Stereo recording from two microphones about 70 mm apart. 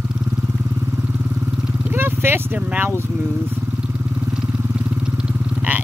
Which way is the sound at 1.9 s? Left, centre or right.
Right.